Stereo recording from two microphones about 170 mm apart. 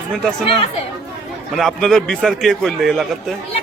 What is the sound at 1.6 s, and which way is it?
A man's voice, centre (ahead or behind).